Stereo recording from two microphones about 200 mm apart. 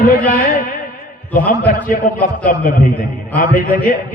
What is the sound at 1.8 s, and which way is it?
A man's voice, 45° left (ahead or behind).